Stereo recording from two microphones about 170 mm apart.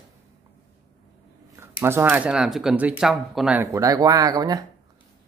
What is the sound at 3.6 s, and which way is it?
Speech, 20° right (ahead or behind).